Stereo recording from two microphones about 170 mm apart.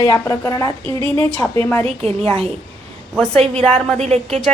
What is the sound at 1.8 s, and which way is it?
Speech, 35° right (ahead or behind).